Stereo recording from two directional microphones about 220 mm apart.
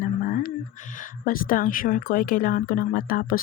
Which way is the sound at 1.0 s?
40° left (ahead or behind).